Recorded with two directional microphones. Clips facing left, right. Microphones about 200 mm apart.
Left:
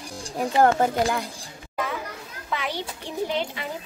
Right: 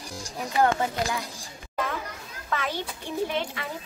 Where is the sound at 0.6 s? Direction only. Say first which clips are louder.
Left 4 dB; 50° left (ahead or behind).